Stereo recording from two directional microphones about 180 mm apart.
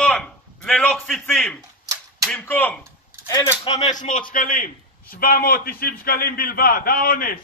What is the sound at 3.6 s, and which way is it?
Speech, 40° left (ahead or behind).